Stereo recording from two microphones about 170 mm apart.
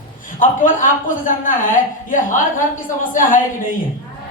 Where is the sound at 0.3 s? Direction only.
50° left (ahead or behind).